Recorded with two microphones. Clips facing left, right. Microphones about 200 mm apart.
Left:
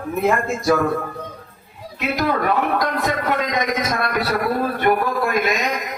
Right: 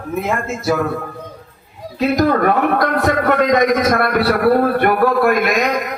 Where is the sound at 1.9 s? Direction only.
45° right (ahead or behind).